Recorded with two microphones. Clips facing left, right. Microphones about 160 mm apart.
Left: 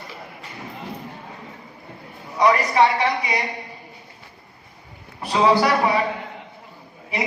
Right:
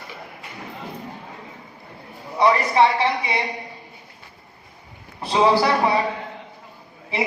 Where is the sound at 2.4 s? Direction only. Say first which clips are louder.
Even; 30° right (ahead or behind).